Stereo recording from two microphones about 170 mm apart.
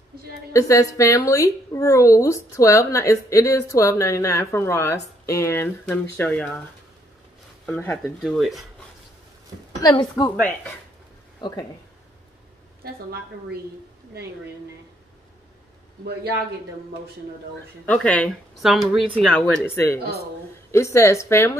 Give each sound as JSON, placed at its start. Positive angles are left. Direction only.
{"t": 0.5, "sound": "a woman's voice", "side_deg": 20}
{"t": 7.6, "sound": "a woman's voice", "side_deg": 10}
{"t": 8.2, "sound": "speech", "side_deg": 0}
{"t": 9.8, "sound": "a woman's voice", "side_deg": 20}
{"t": 17.8, "sound": "a woman's voice", "side_deg": 5}